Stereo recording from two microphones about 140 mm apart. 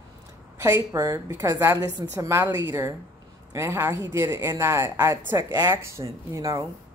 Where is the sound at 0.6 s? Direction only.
20° right (ahead or behind).